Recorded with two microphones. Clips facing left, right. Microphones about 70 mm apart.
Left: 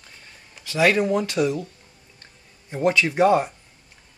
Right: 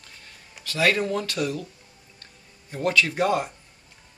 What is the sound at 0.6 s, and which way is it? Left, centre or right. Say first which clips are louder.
Speech: left 4 dB; centre.